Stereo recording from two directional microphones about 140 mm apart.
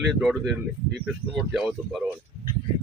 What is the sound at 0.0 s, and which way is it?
Speech, centre (ahead or behind).